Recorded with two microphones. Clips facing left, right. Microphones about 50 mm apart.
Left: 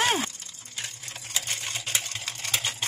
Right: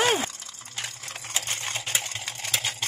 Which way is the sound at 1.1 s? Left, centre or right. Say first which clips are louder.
Right 3 dB; right.